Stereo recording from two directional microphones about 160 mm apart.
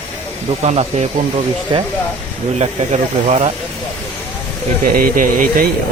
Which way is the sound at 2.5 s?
45° right (ahead or behind).